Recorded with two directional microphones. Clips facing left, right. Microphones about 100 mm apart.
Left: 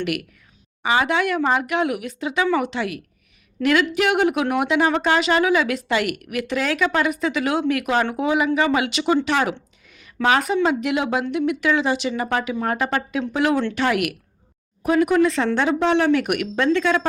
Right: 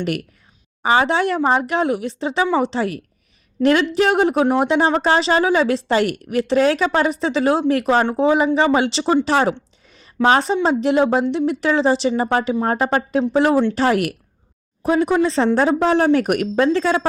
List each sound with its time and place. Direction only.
0.8 s speech: 35° right (ahead or behind)